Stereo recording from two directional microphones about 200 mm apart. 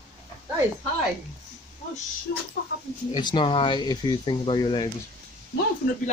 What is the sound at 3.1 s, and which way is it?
Speech, 25° left (ahead or behind).